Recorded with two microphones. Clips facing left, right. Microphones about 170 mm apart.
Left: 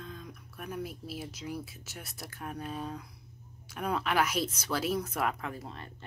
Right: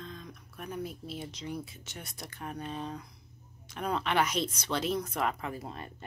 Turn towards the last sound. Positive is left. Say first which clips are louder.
# right 2 dB
turn(degrees=-10)  # may be behind; listen again after turning